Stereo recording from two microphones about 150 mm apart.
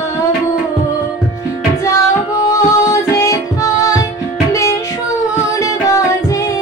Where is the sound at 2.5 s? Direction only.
25° left (ahead or behind).